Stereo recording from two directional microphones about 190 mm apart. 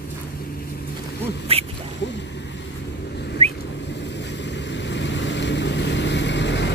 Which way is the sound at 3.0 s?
60° left (ahead or behind).